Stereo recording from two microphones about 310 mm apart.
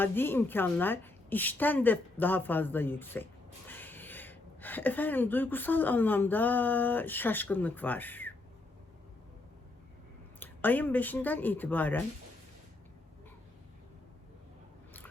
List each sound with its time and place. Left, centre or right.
0.0 s a woman's voice: centre
10.4 s speech: centre